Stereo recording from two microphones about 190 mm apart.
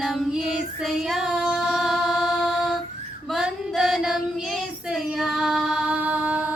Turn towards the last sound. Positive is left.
turn(degrees=-10)  # may be behind; listen again after turning